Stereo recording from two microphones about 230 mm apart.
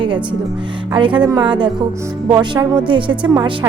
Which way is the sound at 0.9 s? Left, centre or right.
Right.